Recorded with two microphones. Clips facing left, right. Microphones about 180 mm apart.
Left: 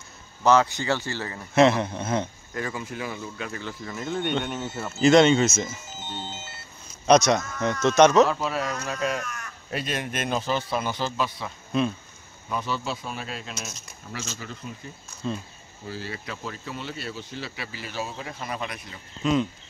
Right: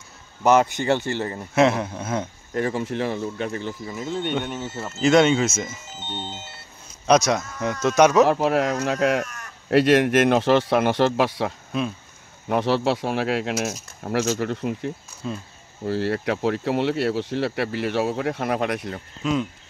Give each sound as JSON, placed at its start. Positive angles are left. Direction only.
{"t": 0.4, "sound": "speech", "side_deg": -20}
{"t": 1.5, "sound": "a man's voice", "side_deg": -5}
{"t": 2.5, "sound": "speech", "side_deg": -30}
{"t": 3.9, "sound": "a man's voice", "side_deg": -5}
{"t": 8.3, "sound": "speech", "side_deg": -60}
{"t": 15.2, "sound": "speech", "side_deg": -5}
{"t": 15.8, "sound": "speech", "side_deg": -65}